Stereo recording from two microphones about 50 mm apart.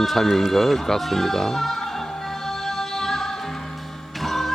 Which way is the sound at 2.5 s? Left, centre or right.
Centre.